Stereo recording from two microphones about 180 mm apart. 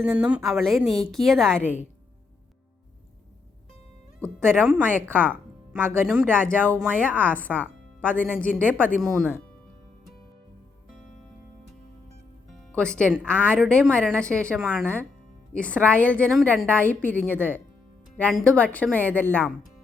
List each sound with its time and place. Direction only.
0.0 s speech: 5° right (ahead or behind)
1.6 s speech: 10° right (ahead or behind)
4.4 s speech: 5° left (ahead or behind)
7.3 s a woman's voice: 10° left (ahead or behind)
10.9 s music: 45° left (ahead or behind)
12.7 s a woman's voice: 5° left (ahead or behind)